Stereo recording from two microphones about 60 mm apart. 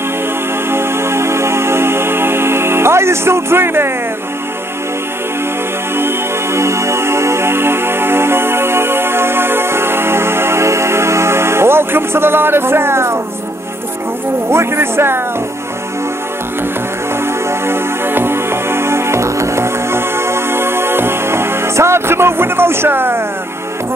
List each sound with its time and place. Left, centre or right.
0.7 s music: right
5.9 s music: right
14.5 s speech: right
17.5 s music: right